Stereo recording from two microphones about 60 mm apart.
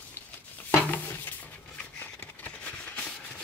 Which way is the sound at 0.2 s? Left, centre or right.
Left.